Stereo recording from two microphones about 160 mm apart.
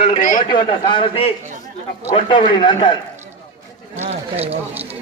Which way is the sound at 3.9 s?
45° right (ahead or behind).